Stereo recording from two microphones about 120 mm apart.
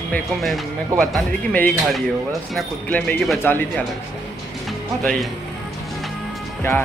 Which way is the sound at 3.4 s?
15° left (ahead or behind).